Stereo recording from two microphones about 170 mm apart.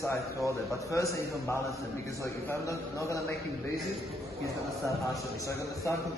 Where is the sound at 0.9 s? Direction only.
20° left (ahead or behind).